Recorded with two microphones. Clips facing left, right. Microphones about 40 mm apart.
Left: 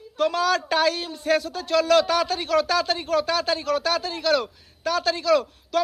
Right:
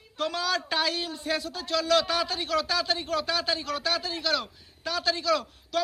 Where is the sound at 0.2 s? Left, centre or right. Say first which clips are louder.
Left 7 dB; left.